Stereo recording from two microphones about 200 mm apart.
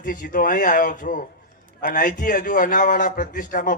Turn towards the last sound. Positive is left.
turn(degrees=40)  # may be behind; listen again after turning